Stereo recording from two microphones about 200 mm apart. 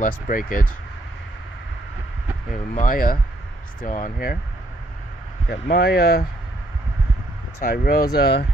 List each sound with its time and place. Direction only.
0.0 s speech: 45° left (ahead or behind)
2.7 s speech: 40° left (ahead or behind)
5.5 s speech: 55° left (ahead or behind)
7.6 s speech: 50° left (ahead or behind)